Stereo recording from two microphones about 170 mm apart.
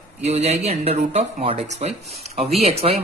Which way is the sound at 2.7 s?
35° right (ahead or behind).